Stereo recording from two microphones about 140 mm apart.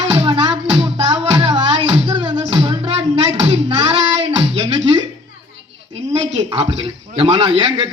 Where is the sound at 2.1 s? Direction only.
35° right (ahead or behind).